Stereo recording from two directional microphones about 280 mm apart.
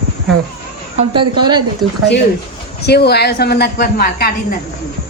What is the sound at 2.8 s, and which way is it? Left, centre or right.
A woman's voice, left.